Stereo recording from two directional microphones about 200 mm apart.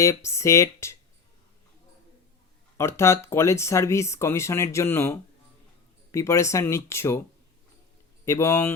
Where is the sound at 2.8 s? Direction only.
15° left (ahead or behind).